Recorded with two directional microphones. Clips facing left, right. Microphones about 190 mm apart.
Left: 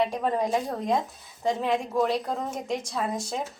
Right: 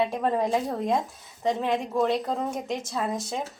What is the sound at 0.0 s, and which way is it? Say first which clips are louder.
A woman's voice: right 1 dB; centre (ahead or behind).